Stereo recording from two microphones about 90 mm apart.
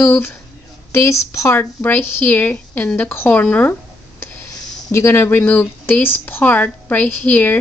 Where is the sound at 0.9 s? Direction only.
35° left (ahead or behind); by 3.7 s 15° left (ahead or behind).